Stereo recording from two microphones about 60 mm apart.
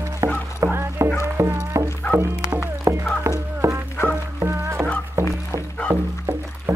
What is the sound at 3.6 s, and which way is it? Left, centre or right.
Music, right.